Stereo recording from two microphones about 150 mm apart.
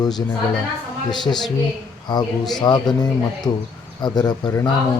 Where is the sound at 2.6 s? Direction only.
25° left (ahead or behind).